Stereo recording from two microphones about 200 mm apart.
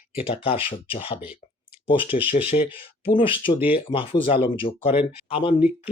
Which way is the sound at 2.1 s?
40° left (ahead or behind).